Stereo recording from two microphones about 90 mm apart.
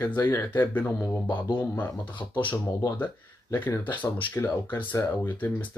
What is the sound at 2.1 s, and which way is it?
Speech, 65° left (ahead or behind).